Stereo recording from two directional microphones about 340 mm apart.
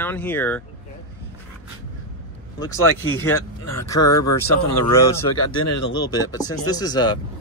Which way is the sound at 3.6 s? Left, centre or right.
Left.